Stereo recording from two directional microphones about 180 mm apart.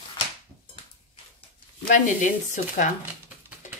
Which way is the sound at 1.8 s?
45° left (ahead or behind).